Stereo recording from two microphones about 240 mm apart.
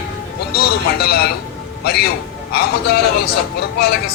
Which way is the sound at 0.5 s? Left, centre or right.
Left.